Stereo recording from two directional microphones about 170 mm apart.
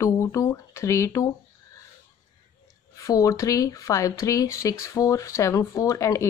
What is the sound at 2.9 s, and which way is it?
Speech, 20° left (ahead or behind).